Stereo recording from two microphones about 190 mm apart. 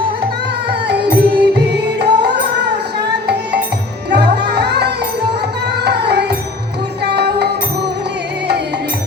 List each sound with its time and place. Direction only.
0.7 s music: 60° right (ahead or behind)
4.1 s music: 65° right (ahead or behind)